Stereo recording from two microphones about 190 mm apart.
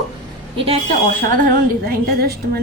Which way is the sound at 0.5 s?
30° right (ahead or behind).